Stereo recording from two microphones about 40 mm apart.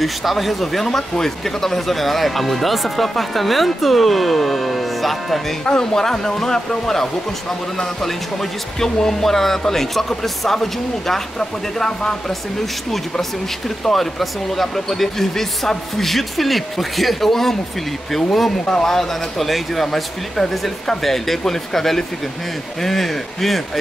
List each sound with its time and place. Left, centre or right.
0.0 s speech: centre
5.7 s speech: centre
13.8 s speech: centre
18.7 s speech: centre
18.9 s speech: centre